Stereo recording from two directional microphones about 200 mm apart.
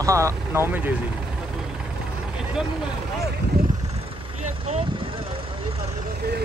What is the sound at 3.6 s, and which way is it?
Vehicle, 50° right (ahead or behind).